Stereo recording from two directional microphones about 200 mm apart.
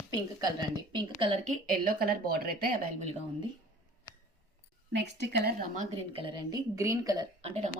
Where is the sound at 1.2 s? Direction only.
25° right (ahead or behind).